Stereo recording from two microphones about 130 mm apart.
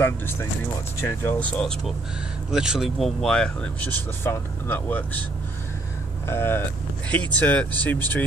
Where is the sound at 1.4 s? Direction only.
10° left (ahead or behind).